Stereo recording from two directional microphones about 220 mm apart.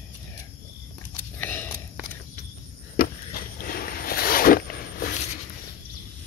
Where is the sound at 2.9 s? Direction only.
40° left (ahead or behind).